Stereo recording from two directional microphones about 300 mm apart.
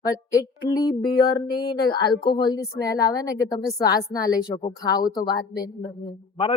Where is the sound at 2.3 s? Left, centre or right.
Centre.